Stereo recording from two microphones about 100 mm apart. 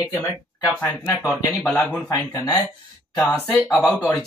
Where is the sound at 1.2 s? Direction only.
10° left (ahead or behind).